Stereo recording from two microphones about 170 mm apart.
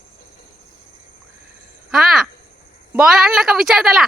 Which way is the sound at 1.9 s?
Centre (ahead or behind).